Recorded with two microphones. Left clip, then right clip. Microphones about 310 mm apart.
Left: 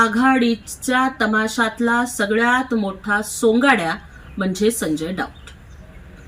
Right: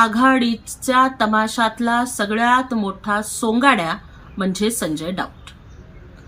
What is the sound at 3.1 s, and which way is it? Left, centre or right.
Speech, centre.